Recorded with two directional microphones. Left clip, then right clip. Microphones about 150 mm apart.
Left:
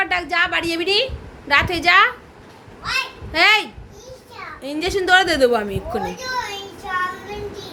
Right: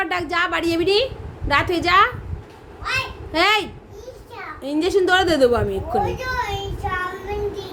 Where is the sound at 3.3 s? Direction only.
15° right (ahead or behind).